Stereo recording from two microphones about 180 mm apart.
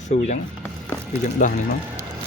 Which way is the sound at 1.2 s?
45° left (ahead or behind).